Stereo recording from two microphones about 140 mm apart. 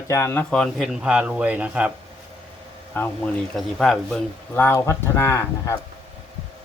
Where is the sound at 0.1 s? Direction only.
15° left (ahead or behind); by 1.9 s 10° right (ahead or behind).